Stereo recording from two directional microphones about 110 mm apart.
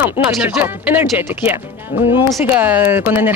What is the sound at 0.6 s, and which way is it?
Speech, 20° right (ahead or behind).